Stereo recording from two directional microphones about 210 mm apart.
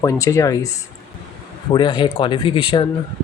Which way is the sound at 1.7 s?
20° left (ahead or behind).